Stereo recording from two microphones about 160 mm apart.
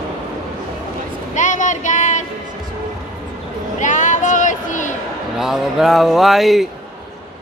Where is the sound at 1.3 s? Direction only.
50° left (ahead or behind).